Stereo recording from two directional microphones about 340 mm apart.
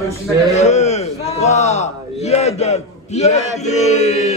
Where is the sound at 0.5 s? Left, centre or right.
Centre.